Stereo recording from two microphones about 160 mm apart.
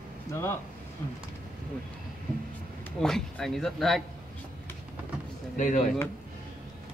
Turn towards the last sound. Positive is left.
turn(degrees=55)  # may be behind; listen again after turning